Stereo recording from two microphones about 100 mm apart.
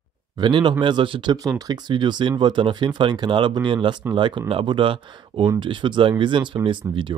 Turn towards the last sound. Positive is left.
turn(degrees=-55)  # may be behind; listen again after turning